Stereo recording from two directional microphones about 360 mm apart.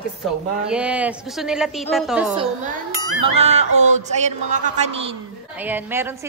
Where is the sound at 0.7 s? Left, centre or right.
Centre.